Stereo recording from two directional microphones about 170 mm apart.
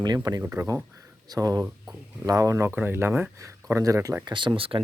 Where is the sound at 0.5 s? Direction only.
10° right (ahead or behind).